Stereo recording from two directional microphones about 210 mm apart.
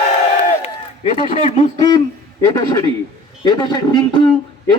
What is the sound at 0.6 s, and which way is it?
A man's voice, 35° left (ahead or behind).